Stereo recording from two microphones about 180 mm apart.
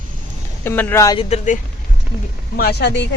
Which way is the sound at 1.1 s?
40° left (ahead or behind).